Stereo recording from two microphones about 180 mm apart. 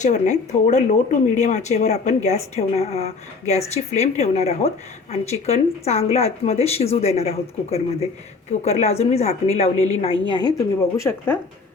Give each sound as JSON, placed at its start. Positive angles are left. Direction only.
{"t": 0.0, "sound": "a woman's voice", "side_deg": 40}